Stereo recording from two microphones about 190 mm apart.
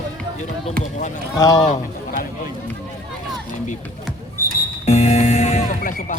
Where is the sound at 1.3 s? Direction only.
20° left (ahead or behind).